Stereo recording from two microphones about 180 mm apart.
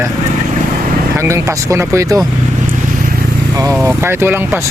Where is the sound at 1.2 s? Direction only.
15° right (ahead or behind).